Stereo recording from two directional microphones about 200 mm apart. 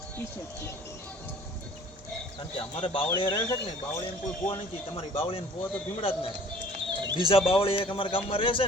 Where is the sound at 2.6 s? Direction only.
25° left (ahead or behind).